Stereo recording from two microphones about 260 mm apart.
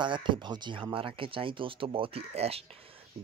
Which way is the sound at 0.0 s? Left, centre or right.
Centre.